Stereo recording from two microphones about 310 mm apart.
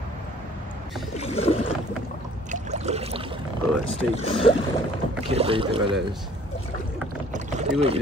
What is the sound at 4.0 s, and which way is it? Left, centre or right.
Speech, centre.